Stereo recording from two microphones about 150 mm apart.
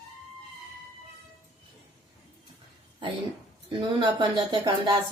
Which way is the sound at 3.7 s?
30° right (ahead or behind).